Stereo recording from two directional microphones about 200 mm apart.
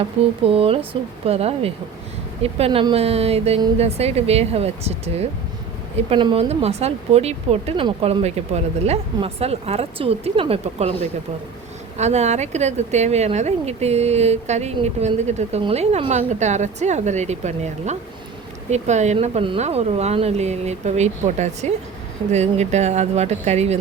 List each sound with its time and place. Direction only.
0.0 s speech: 30° right (ahead or behind)
11.9 s speech: 35° right (ahead or behind)